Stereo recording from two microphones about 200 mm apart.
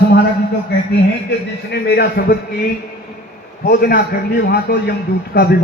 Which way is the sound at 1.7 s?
55° left (ahead or behind).